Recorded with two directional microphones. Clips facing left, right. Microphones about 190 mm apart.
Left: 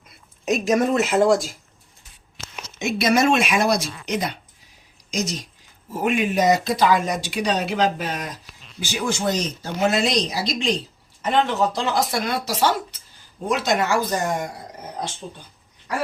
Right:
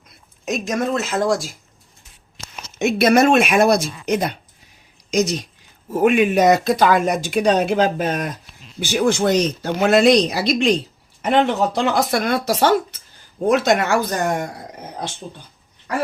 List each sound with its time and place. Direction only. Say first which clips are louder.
0.7 s speech: left 3 dB; 10° left (ahead or behind)
2.7 s speech: right 5 dB; 60° right (ahead or behind)
5.1 s speech: right 7 dB; 65° right (ahead or behind)
8.8 s speech: right 7 dB; 60° right (ahead or behind)